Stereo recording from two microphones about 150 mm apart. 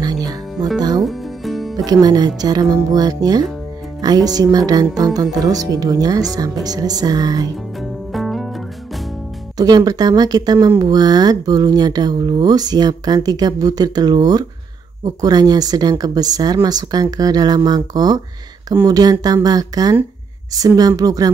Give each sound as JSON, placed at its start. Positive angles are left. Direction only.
{"t": 0.0, "sound": "music", "side_deg": -25}
{"t": 0.7, "sound": "speech", "side_deg": -25}
{"t": 1.0, "sound": "music", "side_deg": 0}
{"t": 1.9, "sound": "speech", "side_deg": -25}
{"t": 8.1, "sound": "music", "side_deg": 0}
{"t": 9.6, "sound": "speech", "side_deg": -25}